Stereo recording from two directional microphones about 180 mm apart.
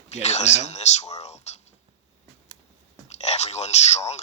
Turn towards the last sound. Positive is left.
turn(degrees=40)  # may be behind; listen again after turning